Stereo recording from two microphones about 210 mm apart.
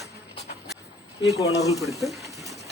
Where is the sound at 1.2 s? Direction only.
15° left (ahead or behind).